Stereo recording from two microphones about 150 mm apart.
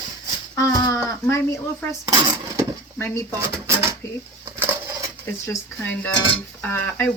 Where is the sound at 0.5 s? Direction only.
20° left (ahead or behind).